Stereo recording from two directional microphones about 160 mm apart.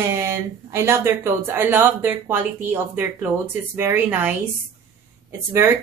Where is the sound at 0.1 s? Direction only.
15° right (ahead or behind).